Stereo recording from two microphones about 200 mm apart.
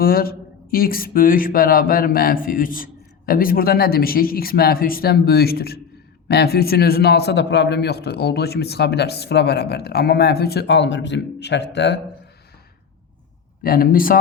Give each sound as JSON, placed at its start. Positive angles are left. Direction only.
{"t": 0.0, "sound": "a man's voice", "side_deg": 50}
{"t": 13.6, "sound": "speech", "side_deg": 45}